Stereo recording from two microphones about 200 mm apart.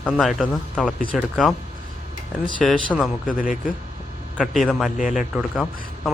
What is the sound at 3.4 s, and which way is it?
Speech, 40° left (ahead or behind).